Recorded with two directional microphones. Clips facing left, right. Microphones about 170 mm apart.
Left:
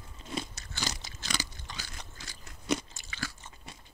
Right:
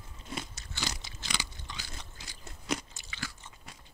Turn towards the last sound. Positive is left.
turn(degrees=45)  # may be behind; listen again after turning